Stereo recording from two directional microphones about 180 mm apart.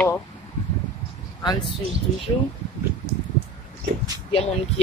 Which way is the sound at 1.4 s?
25° left (ahead or behind).